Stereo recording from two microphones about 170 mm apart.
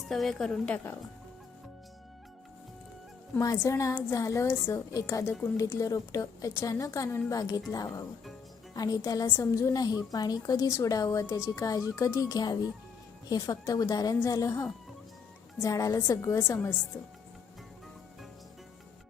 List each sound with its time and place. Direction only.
0.0 s a woman's voice: centre (ahead or behind)
3.3 s a woman's voice: 15° left (ahead or behind)